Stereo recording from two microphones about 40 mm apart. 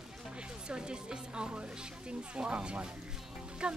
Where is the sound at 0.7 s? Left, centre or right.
Right.